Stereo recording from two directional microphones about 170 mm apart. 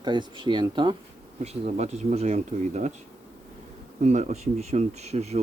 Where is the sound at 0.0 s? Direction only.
25° right (ahead or behind).